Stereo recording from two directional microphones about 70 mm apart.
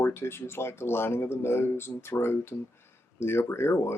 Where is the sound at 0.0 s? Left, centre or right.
Left.